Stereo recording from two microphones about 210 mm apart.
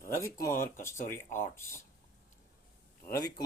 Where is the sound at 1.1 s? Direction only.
10° left (ahead or behind).